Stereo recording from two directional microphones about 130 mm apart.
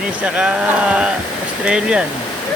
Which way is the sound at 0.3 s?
10° right (ahead or behind).